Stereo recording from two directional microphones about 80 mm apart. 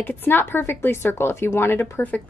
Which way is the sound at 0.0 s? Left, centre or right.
Left.